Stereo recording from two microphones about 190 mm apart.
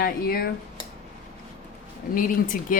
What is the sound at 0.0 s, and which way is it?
Speech, 50° left (ahead or behind).